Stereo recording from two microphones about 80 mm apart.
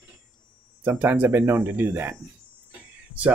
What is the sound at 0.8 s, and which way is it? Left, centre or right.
Speech, right.